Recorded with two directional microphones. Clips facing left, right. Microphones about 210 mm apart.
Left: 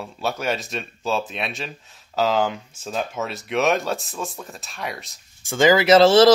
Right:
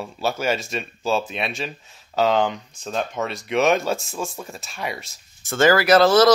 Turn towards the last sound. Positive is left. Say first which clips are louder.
# left 2 dB
turn(degrees=25)  # may be behind; listen again after turning